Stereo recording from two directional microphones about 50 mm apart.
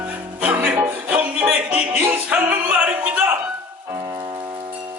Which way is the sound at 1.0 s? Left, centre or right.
Right.